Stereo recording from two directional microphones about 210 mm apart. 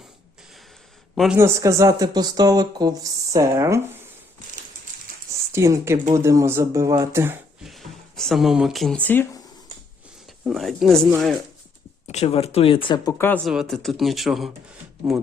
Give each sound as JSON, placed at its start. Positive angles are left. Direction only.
{"t": 1.1, "sound": "a man's voice", "side_deg": 0}
{"t": 1.4, "sound": "speech", "side_deg": -15}
{"t": 5.5, "sound": "speech", "side_deg": -10}
{"t": 7.6, "sound": "speech", "side_deg": 0}
{"t": 10.4, "sound": "speech", "side_deg": 0}
{"t": 12.0, "sound": "speech", "side_deg": 30}